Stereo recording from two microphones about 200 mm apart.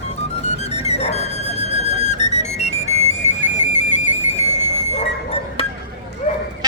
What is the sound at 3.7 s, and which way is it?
Music, 35° left (ahead or behind).